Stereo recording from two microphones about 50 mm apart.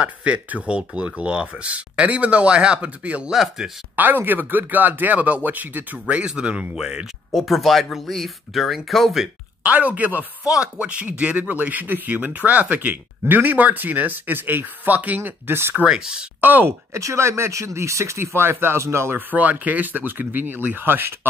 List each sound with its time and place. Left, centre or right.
0.0 s speech: right
3.3 s speech: centre
3.9 s speech: right
6.2 s speech: right
7.3 s speech: centre
9.6 s speech: right
10.6 s speech: right
15.7 s speech: right
16.3 s speech: right
16.6 s speech: right
19.1 s speech: right